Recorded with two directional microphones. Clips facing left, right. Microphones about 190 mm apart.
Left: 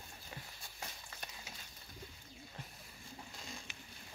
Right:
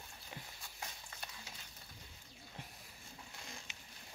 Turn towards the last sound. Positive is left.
turn(degrees=-20)  # may be behind; listen again after turning